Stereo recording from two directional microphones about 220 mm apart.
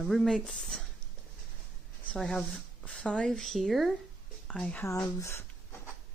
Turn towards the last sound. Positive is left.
turn(degrees=15)  # may be behind; listen again after turning